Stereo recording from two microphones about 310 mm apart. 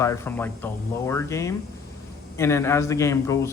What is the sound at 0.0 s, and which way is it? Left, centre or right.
A man's voice, centre.